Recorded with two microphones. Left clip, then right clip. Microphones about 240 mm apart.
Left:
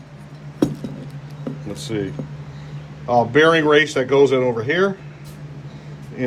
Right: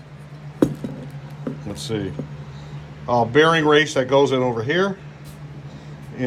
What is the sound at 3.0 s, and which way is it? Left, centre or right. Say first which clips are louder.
Speech: left 2 dB; centre.